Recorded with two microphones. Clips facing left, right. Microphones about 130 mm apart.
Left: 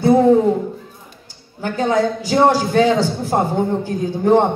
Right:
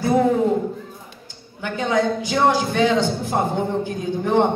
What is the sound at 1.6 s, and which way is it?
A man's voice, 40° left (ahead or behind).